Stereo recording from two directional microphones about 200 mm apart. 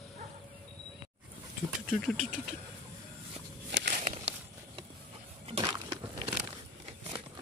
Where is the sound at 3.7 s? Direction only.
65° right (ahead or behind).